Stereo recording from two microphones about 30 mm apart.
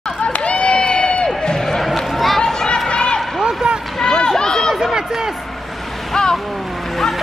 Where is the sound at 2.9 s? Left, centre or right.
Left.